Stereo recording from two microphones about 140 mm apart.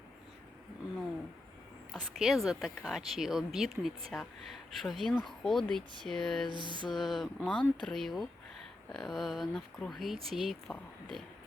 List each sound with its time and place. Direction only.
1.9 s speech: centre (ahead or behind)
6.6 s music: 35° right (ahead or behind)
6.9 s speech: centre (ahead or behind)